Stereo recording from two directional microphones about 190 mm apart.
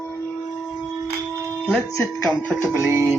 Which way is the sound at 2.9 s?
15° right (ahead or behind).